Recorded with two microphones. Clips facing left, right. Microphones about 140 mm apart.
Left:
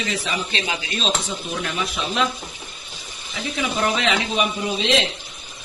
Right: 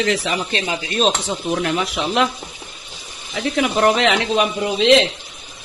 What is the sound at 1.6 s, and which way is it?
Speech, 60° right (ahead or behind).